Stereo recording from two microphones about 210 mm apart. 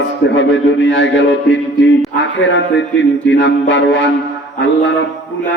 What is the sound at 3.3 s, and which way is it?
Speech, 60° left (ahead or behind).